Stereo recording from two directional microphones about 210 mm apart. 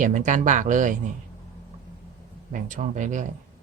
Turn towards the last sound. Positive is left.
turn(degrees=-35)  # may be behind; listen again after turning